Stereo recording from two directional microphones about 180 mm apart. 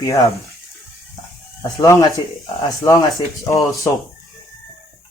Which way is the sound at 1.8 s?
20° left (ahead or behind).